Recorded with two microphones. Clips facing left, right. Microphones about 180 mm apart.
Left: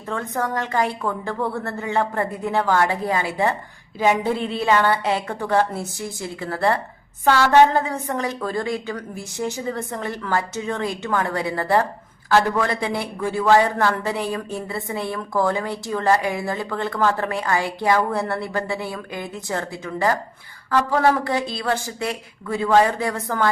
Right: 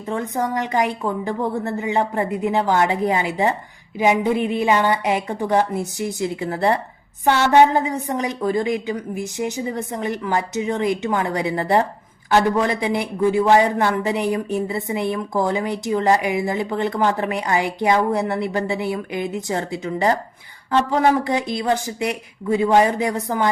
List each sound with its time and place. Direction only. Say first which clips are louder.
0.1 s a man's voice: right 2 dB; 15° right (ahead or behind)